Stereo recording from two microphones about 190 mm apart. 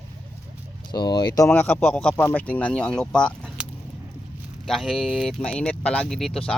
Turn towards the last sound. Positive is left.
turn(degrees=0)  # may be behind; listen again after turning